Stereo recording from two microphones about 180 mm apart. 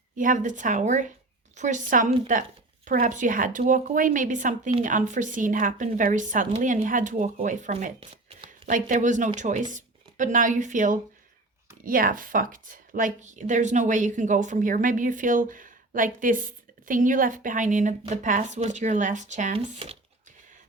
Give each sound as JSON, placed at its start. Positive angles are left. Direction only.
{"t": 0.2, "sound": "a woman's voice", "side_deg": -45}